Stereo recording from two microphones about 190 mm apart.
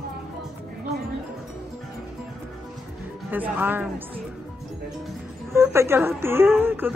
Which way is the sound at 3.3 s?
10° right (ahead or behind).